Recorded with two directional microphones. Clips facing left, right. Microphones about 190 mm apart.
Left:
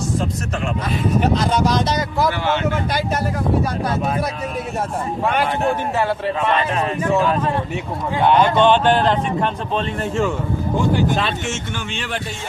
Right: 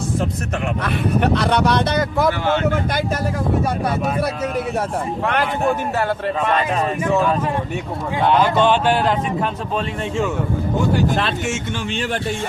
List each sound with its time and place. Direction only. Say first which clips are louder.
0.9 s speech: even; 65° right (ahead or behind)
6.0 s speech: even; 45° right (ahead or behind)
8.3 s speech: left 2 dB; 5° right (ahead or behind)